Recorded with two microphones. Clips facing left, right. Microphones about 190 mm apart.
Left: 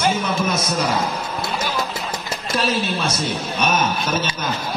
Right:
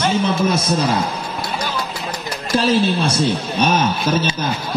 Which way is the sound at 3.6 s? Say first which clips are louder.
Right 3 dB; 30° right (ahead or behind).